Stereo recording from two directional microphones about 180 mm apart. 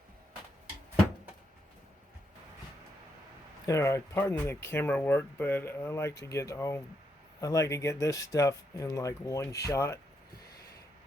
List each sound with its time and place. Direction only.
3.7 s speech: 15° left (ahead or behind)